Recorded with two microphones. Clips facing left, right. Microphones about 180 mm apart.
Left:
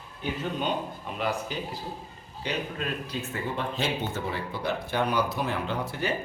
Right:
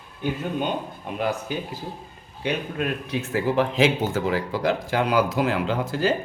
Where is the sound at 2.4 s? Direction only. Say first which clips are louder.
Right 5 dB; 55° right (ahead or behind); by 6.1 s 90° right.